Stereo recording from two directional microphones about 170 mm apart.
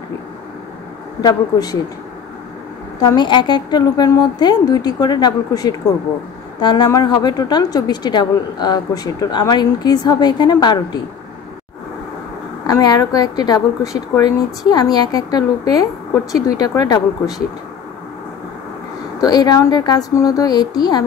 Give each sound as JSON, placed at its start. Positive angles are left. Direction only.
{"t": 1.2, "sound": "a woman's voice", "side_deg": 20}
{"t": 3.0, "sound": "a woman's voice", "side_deg": 25}
{"t": 12.6, "sound": "a woman's voice", "side_deg": 20}
{"t": 19.2, "sound": "a woman's voice", "side_deg": 25}